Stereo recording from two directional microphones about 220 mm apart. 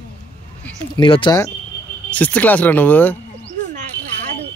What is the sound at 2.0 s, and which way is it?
Speech, 5° left (ahead or behind).